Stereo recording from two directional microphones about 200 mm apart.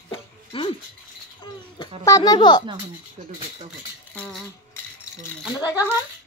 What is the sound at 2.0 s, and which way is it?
Speech, 15° left (ahead or behind).